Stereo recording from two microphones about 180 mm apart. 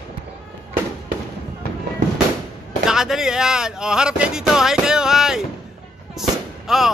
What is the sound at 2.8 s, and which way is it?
Speech, 5° right (ahead or behind).